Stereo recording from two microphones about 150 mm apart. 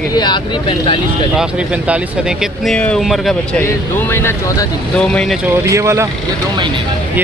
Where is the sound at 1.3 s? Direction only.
5° right (ahead or behind).